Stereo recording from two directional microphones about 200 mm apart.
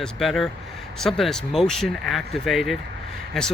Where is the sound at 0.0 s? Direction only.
Centre (ahead or behind).